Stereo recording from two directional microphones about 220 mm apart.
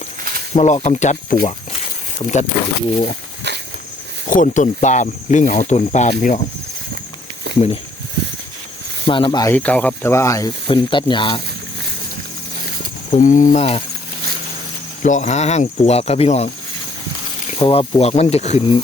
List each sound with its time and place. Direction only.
0.5 s speech: 30° left (ahead or behind)
3.5 s walk: 50° right (ahead or behind)
4.3 s speech: 35° left (ahead or behind)
7.5 s a sound: 50° right (ahead or behind)
9.0 s speech: 20° left (ahead or behind)
9.6 s speech: 5° left (ahead or behind)
13.1 s speech: 35° left (ahead or behind)
15.0 s speech: 35° left (ahead or behind)
17.6 s speech: 25° left (ahead or behind)